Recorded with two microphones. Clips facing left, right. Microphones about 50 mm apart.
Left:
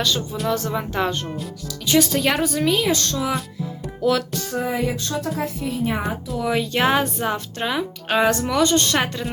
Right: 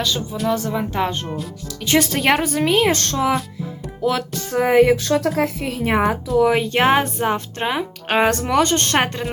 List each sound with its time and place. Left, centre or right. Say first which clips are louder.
0.0 s speech: right 1 dB; centre
1.6 s speech: even; right
4.5 s speech: right 10 dB; right
6.4 s speech: right 3 dB; right
8.0 s speech: right 1 dB; right